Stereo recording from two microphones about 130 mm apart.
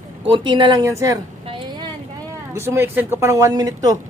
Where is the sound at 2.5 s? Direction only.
20° right (ahead or behind).